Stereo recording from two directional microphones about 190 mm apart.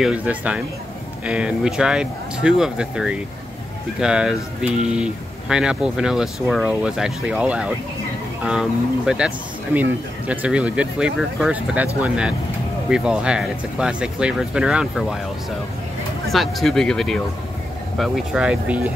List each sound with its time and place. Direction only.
0.0 s speech: 5° right (ahead or behind)
16.3 s speech: centre (ahead or behind)